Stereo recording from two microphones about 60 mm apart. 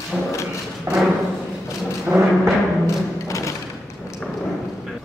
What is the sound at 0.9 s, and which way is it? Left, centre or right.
Music, right.